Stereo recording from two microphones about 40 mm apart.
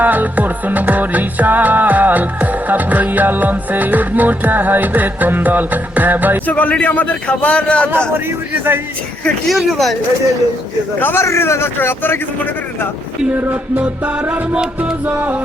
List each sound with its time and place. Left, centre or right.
0.0 s music: right
6.4 s a man's voice: left
8.1 s a man's voice: right
9.5 s speech: centre
11.0 s a man's voice: left
13.8 s music: right